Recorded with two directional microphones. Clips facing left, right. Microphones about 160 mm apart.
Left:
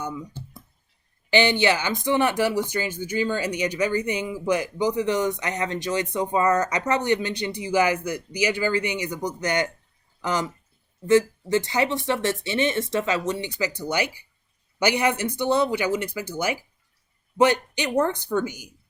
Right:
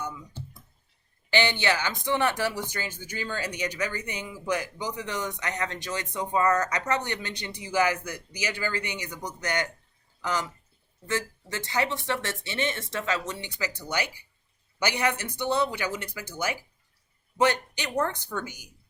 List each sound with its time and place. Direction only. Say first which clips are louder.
1.3 s speech: left 5 dB; 15° left (ahead or behind)
14.8 s speech: left 5 dB; 15° left (ahead or behind)